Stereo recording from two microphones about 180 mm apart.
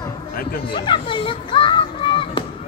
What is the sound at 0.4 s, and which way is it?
Speech, 55° left (ahead or behind).